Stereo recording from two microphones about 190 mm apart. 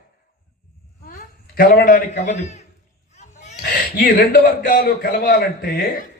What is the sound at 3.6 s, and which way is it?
A man's voice, 50° left (ahead or behind).